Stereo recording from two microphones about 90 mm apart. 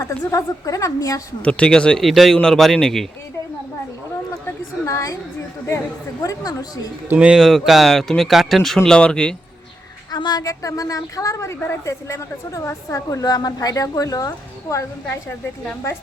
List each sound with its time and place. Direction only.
0.0 s a woman's voice: 40° left (ahead or behind)
1.4 s speech: 10° left (ahead or behind)
4.9 s a woman's voice: 35° left (ahead or behind)
6.2 s a woman's voice: 45° left (ahead or behind)
7.1 s speech: 10° right (ahead or behind); by 9.3 s 10° left (ahead or behind)
10.1 s a woman's voice: 50° left (ahead or behind)
10.5 s a woman's voice: 40° left (ahead or behind)
15.1 s a woman's voice: 25° left (ahead or behind)